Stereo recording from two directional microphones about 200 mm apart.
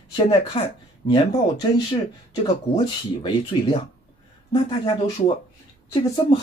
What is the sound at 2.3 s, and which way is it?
Speech, 25° left (ahead or behind).